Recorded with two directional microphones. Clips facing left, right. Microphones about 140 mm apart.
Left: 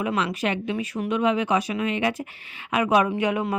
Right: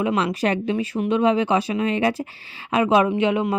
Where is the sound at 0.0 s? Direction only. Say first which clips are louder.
Right 4 dB; 25° right (ahead or behind).